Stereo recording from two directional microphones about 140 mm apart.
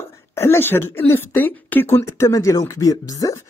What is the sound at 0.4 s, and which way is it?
Speech, 15° left (ahead or behind).